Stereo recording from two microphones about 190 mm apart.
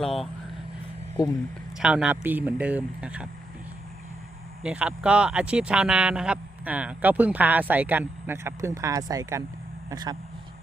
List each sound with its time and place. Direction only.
0.0 s speech: centre (ahead or behind)
1.8 s speech: 5° right (ahead or behind)
4.6 s speech: 5° right (ahead or behind); by 10.2 s 20° right (ahead or behind)